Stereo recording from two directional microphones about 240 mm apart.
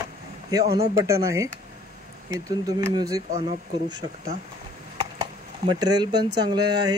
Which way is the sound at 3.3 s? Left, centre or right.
Right.